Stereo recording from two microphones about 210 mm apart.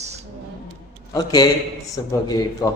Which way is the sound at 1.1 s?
20° left (ahead or behind).